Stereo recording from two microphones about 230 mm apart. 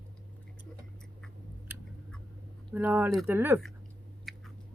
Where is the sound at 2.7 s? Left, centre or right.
Centre.